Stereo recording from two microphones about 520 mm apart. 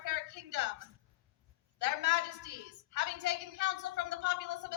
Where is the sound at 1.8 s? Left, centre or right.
Right.